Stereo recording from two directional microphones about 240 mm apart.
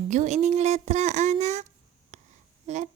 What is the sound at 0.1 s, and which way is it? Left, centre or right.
Speech, right.